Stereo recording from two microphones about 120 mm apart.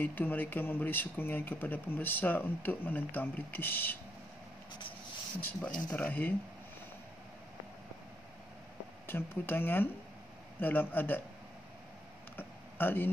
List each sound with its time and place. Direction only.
0.0 s speech: 15° left (ahead or behind)
5.4 s speech: 15° left (ahead or behind)
9.0 s speech: 20° left (ahead or behind)
12.4 s a sound: 15° left (ahead or behind)